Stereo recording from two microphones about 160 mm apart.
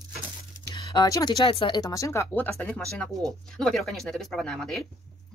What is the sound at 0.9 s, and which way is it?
Speech, 25° left (ahead or behind).